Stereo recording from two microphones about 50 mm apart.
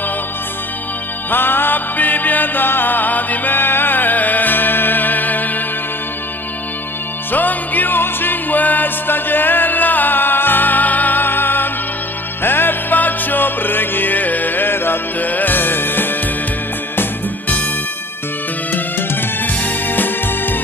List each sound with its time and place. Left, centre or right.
1.3 s music: left
7.3 s music: left
18.7 s music: left